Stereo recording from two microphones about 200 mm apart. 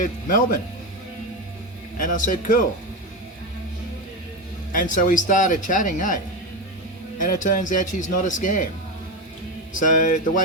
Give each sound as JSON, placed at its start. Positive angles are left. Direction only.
{"t": 0.0, "sound": "a man's voice", "side_deg": 40}
{"t": 2.0, "sound": "a man's voice", "side_deg": 40}
{"t": 4.7, "sound": "a man's voice", "side_deg": 40}
{"t": 7.2, "sound": "a man's voice", "side_deg": 40}
{"t": 9.8, "sound": "a man's voice", "side_deg": 40}